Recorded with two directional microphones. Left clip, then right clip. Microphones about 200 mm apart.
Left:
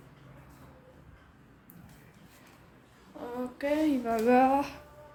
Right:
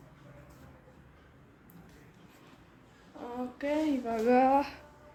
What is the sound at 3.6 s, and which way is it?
Speech, 5° left (ahead or behind).